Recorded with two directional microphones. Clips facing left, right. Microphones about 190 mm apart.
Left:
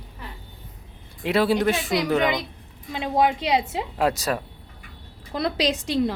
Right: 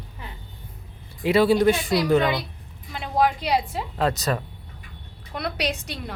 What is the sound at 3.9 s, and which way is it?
Speech, 10° left (ahead or behind).